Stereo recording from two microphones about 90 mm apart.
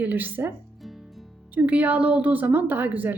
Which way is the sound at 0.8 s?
Centre (ahead or behind).